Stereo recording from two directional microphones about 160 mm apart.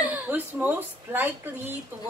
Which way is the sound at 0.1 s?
10° right (ahead or behind).